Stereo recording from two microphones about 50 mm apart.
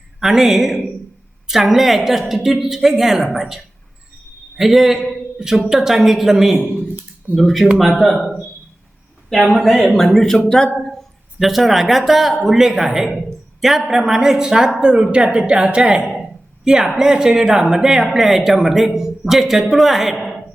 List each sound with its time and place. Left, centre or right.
0.2 s a woman's voice: centre
9.5 s a woman's voice: centre